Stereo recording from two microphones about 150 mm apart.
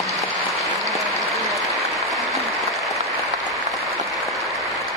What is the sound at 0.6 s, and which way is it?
Applause, centre (ahead or behind).